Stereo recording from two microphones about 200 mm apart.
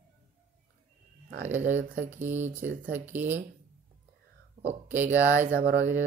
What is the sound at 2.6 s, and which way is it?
Speech, 40° right (ahead or behind).